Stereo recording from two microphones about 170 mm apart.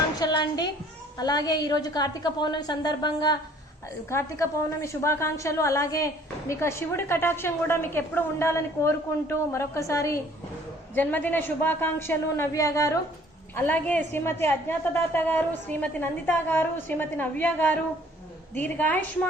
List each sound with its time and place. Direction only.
0.2 s a sound: 25° left (ahead or behind)
1.2 s a woman's voice: 25° left (ahead or behind)
4.1 s a woman's voice: 15° left (ahead or behind)